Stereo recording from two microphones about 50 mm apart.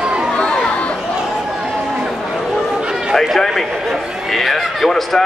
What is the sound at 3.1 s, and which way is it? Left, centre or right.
A man's voice, centre.